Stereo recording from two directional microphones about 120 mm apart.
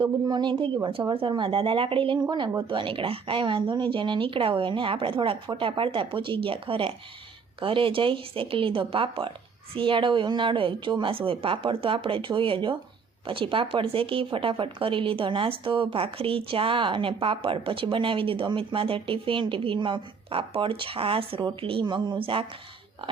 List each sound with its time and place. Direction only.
0.0 s speech: 40° right (ahead or behind)